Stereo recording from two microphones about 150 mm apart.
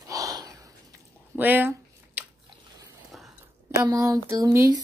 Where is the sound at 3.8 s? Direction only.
25° right (ahead or behind).